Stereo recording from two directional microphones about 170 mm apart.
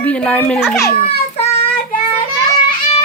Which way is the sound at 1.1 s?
35° left (ahead or behind).